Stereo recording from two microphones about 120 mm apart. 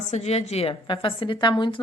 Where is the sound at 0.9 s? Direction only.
45° left (ahead or behind).